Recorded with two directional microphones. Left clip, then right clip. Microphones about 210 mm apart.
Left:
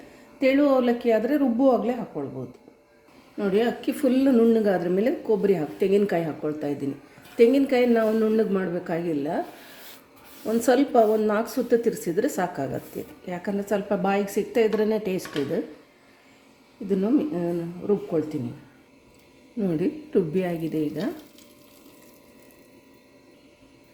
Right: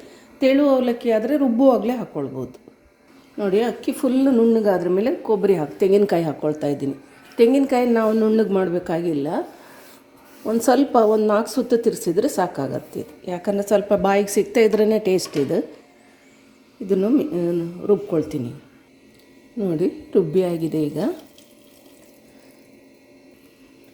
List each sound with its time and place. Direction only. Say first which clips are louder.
0.3 s a woman's voice: right 3 dB; 10° right (ahead or behind)
3.3 s a woman's voice: right 3 dB; 10° right (ahead or behind)
7.3 s a woman's voice: right 2 dB; 10° right (ahead or behind)
10.7 s a woman's voice: right 3 dB; 15° right (ahead or behind)
16.9 s a woman's voice: right 5 dB; 15° right (ahead or behind)
19.5 s a woman's voice: right 4 dB; centre (ahead or behind)